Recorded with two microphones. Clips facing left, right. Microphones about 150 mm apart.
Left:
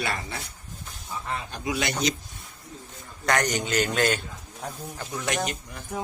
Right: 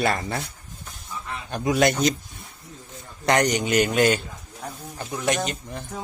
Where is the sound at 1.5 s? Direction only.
50° right (ahead or behind).